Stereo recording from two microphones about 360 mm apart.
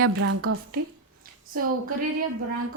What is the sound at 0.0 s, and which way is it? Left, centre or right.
Speech, right.